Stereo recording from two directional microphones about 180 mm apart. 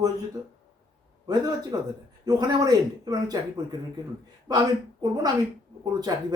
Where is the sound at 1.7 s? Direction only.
20° right (ahead or behind).